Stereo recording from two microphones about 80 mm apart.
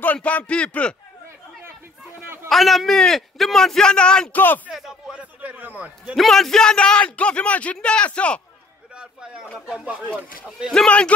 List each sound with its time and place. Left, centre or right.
0.0 s speech: centre
2.5 s a man's voice: centre
4.6 s speech: centre
5.1 s a man's voice: centre
6.1 s speech: centre
8.9 s a sound: centre
9.8 s speech: centre
10.7 s speech: centre